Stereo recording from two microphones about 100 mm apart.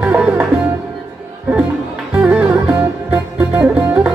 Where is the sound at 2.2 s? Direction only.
10° right (ahead or behind).